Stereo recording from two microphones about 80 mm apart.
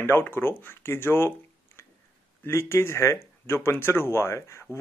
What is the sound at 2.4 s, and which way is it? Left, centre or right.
Speech, left.